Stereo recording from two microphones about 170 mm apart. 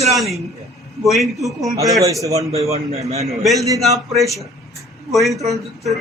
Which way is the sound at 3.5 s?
20° right (ahead or behind).